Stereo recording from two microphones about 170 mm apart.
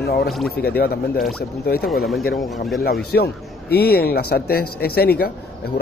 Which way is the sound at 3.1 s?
75° left (ahead or behind).